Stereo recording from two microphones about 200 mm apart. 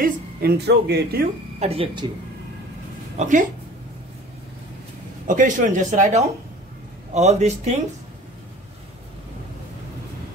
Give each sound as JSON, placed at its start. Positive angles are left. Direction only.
{"t": 0.0, "sound": "speech", "side_deg": -50}
{"t": 1.6, "sound": "speech", "side_deg": -30}
{"t": 3.2, "sound": "speech", "side_deg": -40}
{"t": 5.2, "sound": "speech", "side_deg": -40}